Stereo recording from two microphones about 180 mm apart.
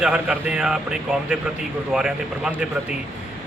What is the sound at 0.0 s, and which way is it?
A man's voice, 5° right (ahead or behind).